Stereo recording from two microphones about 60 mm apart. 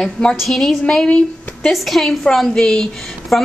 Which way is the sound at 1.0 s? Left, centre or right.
Centre.